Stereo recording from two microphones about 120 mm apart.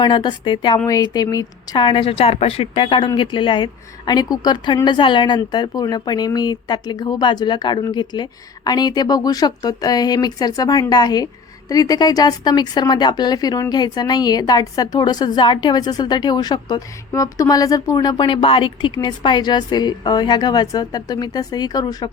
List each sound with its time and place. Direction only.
0.0 s a woman's voice: 40° left (ahead or behind)